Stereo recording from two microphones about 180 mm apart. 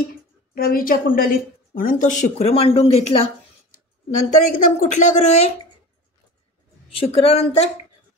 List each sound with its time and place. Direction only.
0.6 s a woman's voice: 55° left (ahead or behind); by 3.3 s 35° left (ahead or behind)
4.3 s a woman's voice: 50° left (ahead or behind)
7.0 s a woman's voice: 30° left (ahead or behind)